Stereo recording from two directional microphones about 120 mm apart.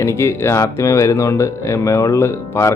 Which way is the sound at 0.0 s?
25° left (ahead or behind).